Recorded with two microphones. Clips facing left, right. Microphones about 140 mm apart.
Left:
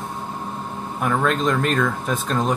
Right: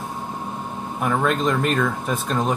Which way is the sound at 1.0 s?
10° right (ahead or behind).